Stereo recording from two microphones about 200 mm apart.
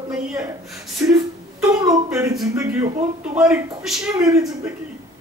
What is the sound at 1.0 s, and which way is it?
Speech, 10° right (ahead or behind).